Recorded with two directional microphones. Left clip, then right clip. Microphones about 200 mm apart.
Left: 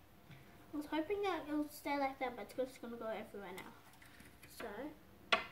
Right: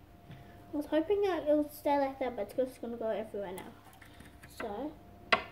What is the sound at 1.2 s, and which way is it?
Speech, 45° left (ahead or behind).